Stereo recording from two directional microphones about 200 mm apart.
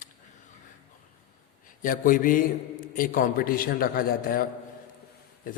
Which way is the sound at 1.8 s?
45° left (ahead or behind).